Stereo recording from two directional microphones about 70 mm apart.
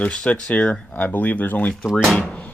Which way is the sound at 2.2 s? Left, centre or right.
Centre.